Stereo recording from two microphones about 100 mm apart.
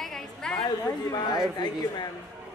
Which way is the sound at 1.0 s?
40° left (ahead or behind).